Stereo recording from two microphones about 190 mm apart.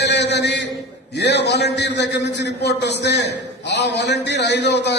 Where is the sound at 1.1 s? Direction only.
65° left (ahead or behind).